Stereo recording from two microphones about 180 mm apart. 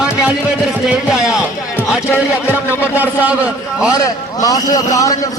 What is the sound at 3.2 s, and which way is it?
Speech, 5° right (ahead or behind).